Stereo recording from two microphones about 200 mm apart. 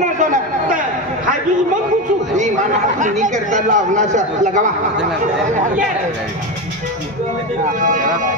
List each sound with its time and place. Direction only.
0.0 s chatter: 40° right (ahead or behind)
2.3 s speech: 35° right (ahead or behind)
7.8 s speech: 40° right (ahead or behind)